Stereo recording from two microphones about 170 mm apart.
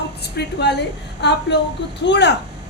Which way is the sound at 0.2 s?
85° left.